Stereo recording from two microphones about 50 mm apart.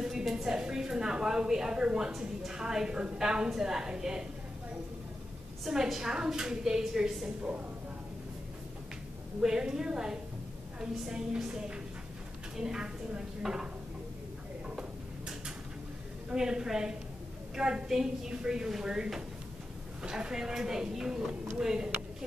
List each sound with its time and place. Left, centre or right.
0.0 s a woman's voice: centre
5.7 s a woman's voice: centre
9.4 s a woman's voice: centre
14.8 s tick-tock: centre
16.3 s a woman's voice: centre